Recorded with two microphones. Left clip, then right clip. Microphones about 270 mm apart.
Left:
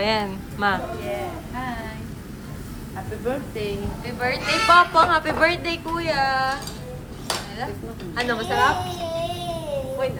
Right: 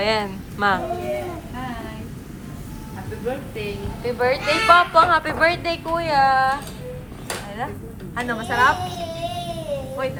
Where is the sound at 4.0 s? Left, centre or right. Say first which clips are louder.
Right 6 dB; centre.